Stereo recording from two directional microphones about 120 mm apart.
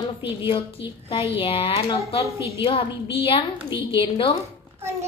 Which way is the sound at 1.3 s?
50° left (ahead or behind).